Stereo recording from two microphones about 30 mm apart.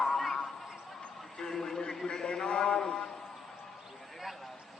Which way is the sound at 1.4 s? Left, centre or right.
Centre.